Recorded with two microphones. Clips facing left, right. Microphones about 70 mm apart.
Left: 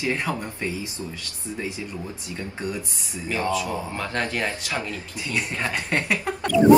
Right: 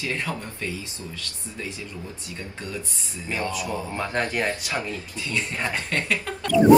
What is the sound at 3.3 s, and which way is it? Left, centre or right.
Speech, left.